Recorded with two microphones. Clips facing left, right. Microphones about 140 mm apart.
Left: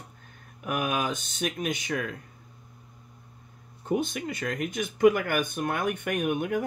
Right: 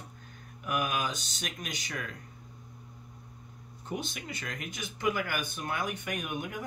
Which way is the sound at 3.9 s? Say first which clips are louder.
Left 9 dB; 50° left (ahead or behind).